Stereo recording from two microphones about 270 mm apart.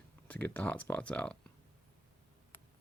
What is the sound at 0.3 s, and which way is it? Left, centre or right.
Speech, centre.